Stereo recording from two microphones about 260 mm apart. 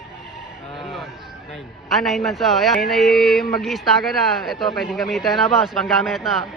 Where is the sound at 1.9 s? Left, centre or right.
Centre.